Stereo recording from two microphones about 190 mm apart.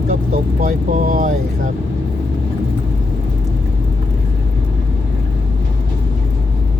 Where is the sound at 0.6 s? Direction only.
45° right (ahead or behind).